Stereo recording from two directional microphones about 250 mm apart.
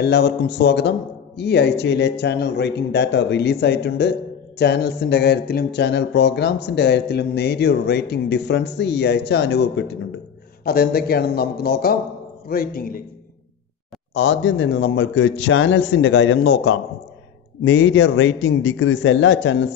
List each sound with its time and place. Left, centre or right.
0.0 s a man's voice: left
14.1 s a man's voice: left